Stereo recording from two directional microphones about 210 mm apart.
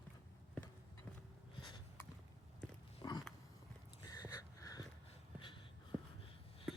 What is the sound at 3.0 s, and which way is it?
Biting, 20° left (ahead or behind).